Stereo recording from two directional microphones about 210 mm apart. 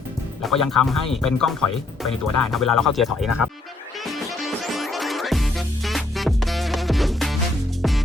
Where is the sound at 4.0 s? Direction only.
Centre (ahead or behind).